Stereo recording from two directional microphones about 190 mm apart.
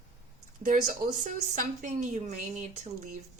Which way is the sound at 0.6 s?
40° right (ahead or behind).